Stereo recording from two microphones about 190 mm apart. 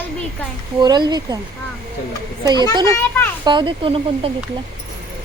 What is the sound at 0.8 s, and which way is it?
Speech, 20° right (ahead or behind).